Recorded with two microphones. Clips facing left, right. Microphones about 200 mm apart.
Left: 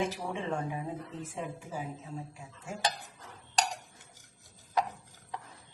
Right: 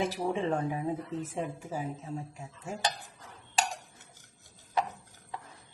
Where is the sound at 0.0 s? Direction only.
35° right (ahead or behind).